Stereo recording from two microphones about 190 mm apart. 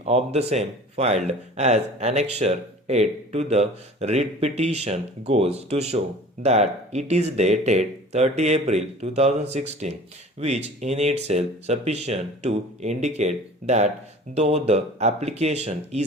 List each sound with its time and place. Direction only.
0.0 s speech: 35° right (ahead or behind)